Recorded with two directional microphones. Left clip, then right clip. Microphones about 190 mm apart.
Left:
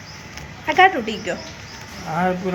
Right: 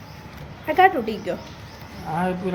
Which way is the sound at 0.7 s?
5° right (ahead or behind).